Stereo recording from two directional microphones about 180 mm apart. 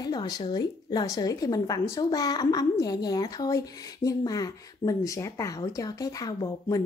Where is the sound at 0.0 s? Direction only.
20° left (ahead or behind).